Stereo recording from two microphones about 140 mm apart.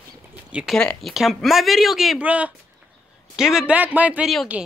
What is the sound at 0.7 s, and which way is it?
A man's voice, 5° left (ahead or behind).